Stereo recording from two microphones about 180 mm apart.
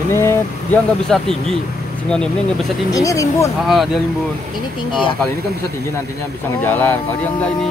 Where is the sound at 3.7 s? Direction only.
Centre (ahead or behind).